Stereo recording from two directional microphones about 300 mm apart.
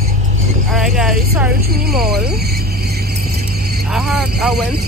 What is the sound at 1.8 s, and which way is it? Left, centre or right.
Speech, right.